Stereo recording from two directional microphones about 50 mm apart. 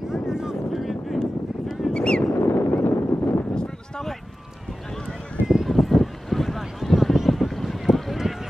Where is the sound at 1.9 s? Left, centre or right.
Centre.